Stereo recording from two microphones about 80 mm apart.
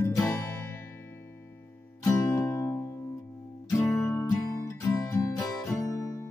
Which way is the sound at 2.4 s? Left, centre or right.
Left.